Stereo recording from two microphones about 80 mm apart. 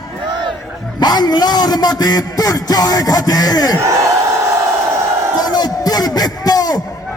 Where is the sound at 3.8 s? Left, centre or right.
Right.